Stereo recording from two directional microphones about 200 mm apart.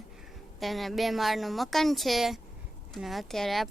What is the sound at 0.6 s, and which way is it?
Speech, centre (ahead or behind).